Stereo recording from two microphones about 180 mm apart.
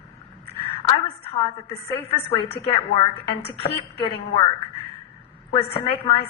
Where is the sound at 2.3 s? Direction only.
30° left (ahead or behind).